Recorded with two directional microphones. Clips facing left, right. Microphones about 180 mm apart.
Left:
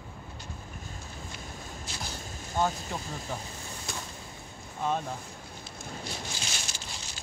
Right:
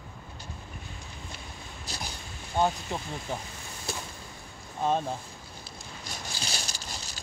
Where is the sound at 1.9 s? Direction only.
35° right (ahead or behind).